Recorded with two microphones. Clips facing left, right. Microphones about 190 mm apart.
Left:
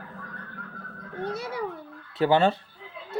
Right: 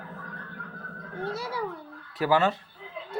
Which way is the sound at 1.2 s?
20° left (ahead or behind).